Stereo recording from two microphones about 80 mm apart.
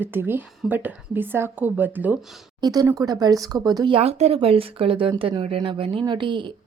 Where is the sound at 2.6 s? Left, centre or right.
Right.